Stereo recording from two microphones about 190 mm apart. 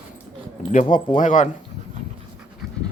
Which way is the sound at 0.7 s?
45° left (ahead or behind).